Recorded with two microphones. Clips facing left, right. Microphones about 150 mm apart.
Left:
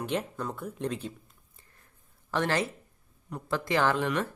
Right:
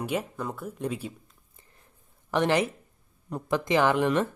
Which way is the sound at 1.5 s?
20° right (ahead or behind).